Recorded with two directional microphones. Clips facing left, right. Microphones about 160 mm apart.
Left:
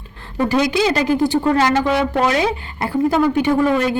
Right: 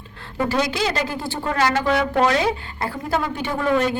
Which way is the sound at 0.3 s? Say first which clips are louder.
Left 5 dB; 20° left (ahead or behind).